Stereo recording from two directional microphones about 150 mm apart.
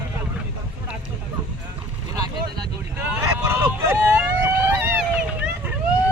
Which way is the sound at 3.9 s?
10° right (ahead or behind).